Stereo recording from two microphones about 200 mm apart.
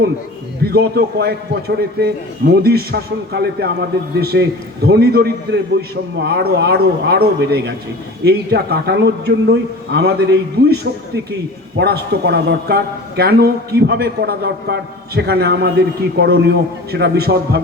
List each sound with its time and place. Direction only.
0.6 s a man's voice: 55° right (ahead or behind)